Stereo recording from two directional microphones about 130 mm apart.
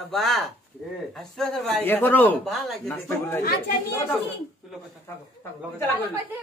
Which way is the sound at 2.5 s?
Centre (ahead or behind).